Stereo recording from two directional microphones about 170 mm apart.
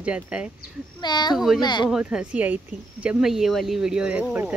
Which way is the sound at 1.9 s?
5° right (ahead or behind).